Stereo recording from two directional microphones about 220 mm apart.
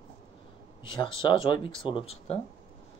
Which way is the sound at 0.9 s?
20° left (ahead or behind).